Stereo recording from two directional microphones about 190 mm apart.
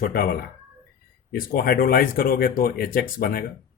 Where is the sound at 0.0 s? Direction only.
50° left (ahead or behind).